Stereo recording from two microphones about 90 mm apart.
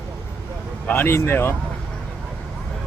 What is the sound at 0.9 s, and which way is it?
Speech, 25° left (ahead or behind).